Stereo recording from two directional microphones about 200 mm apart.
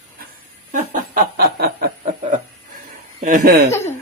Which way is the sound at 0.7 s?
45° right (ahead or behind).